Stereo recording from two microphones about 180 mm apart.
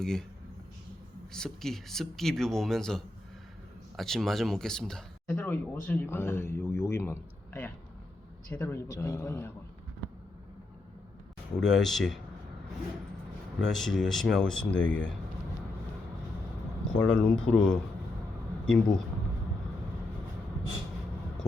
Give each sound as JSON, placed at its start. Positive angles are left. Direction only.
{"t": 0.0, "sound": "speech", "side_deg": 5}
{"t": 1.3, "sound": "speech", "side_deg": 5}
{"t": 11.5, "sound": "speech", "side_deg": 0}
{"t": 13.6, "sound": "speech", "side_deg": 0}
{"t": 17.0, "sound": "speech", "side_deg": 5}